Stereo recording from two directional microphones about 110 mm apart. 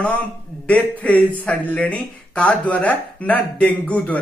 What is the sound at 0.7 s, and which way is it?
Speech, 10° left (ahead or behind).